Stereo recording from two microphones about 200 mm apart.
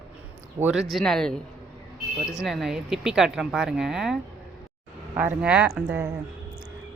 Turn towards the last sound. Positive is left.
turn(degrees=-10)  # may be behind; listen again after turning